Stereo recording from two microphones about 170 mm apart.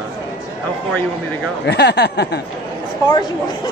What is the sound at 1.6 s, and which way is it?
Speech, 80° left.